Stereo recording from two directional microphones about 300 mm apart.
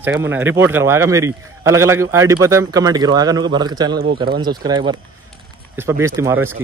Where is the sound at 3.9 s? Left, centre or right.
Right.